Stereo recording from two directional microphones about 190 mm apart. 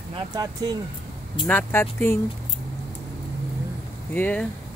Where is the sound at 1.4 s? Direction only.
10° left (ahead or behind).